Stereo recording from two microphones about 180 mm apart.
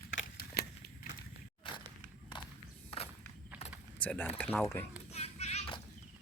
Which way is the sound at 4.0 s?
10° left (ahead or behind).